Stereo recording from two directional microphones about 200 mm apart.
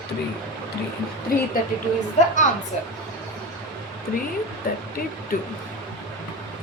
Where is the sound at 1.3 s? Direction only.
45° left (ahead or behind).